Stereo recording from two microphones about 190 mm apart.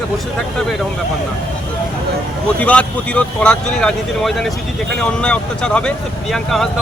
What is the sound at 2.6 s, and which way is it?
Speech, 5° left (ahead or behind).